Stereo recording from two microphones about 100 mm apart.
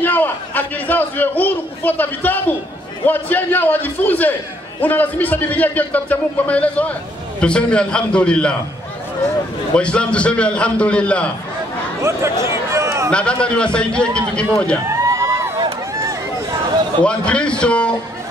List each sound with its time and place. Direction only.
0.0 s a man's voice: 20° left (ahead or behind)
9.8 s speech: 10° left (ahead or behind)
12.0 s speech: 30° right (ahead or behind)
12.4 s a sound: 30° right (ahead or behind)
13.1 s speech: 10° left (ahead or behind)
14.9 s music: 30° right (ahead or behind)
17.0 s speech: 10° left (ahead or behind)